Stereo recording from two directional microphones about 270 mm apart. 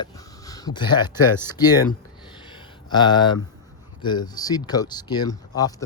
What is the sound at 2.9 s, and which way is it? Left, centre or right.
Speech, centre.